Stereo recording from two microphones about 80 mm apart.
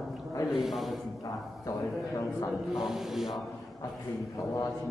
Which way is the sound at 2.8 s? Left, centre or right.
Centre.